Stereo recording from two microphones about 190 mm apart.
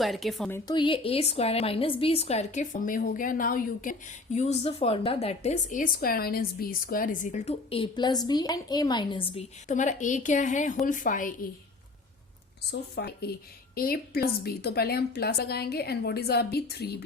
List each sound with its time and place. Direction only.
0.0 s a woman's voice: centre (ahead or behind)
0.5 s a woman's voice: 25° left (ahead or behind); by 11.3 s 45° left (ahead or behind)
12.7 s a woman's voice: 60° left (ahead or behind)